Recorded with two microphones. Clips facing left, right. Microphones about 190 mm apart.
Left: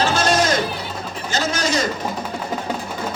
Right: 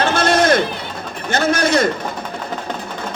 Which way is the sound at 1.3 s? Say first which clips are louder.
Right 6 dB; 55° right (ahead or behind).